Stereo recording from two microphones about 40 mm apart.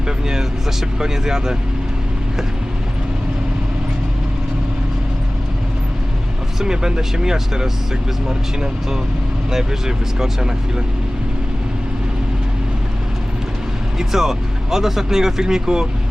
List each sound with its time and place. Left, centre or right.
0.9 s speech: centre
6.6 s speech: centre
14.0 s speech: centre